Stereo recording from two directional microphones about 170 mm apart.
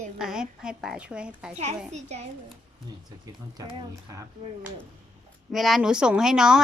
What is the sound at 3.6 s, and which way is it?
Speech, 20° right (ahead or behind).